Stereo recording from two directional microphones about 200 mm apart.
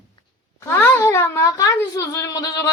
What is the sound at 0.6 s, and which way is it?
A woman's voice, 10° left (ahead or behind).